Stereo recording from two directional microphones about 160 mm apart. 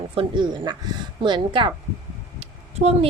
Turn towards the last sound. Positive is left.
turn(degrees=-40)  # may be behind; listen again after turning